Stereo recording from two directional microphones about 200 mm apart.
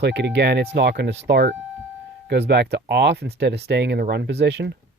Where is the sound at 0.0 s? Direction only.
60° right (ahead or behind).